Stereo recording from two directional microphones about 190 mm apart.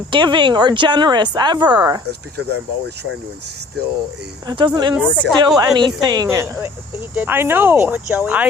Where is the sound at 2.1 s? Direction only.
60° right (ahead or behind).